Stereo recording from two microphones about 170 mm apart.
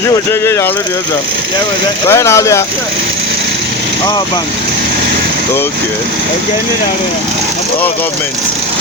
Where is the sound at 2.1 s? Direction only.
15° left (ahead or behind).